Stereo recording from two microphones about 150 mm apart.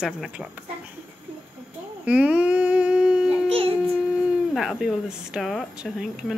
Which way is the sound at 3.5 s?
40° right (ahead or behind).